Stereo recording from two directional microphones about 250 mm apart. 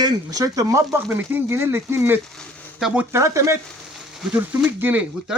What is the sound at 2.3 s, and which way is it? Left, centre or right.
Speech, centre.